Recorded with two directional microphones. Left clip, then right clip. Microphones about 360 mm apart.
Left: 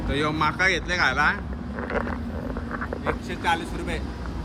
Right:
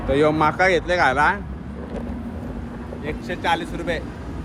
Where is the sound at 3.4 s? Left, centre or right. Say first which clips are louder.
Right 3 dB; centre.